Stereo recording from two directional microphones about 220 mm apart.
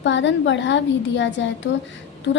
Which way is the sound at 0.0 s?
55° left (ahead or behind).